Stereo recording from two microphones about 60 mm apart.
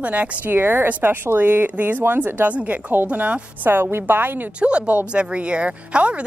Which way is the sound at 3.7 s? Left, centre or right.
Right.